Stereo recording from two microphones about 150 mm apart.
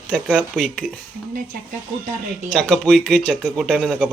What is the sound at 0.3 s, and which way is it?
Speech, 5° right (ahead or behind).